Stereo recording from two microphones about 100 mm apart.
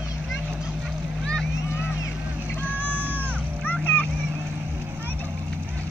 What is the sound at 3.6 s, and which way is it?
Vehicle, 20° left (ahead or behind).